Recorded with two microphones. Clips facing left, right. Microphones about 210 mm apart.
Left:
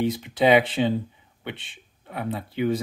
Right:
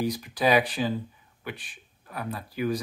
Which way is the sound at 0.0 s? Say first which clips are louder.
Left 4 dB; 25° left (ahead or behind).